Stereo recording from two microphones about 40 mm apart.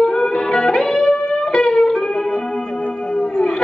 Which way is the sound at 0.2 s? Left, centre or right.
Centre.